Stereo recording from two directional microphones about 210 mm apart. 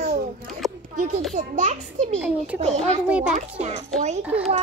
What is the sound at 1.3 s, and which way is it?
Speech, 35° right (ahead or behind).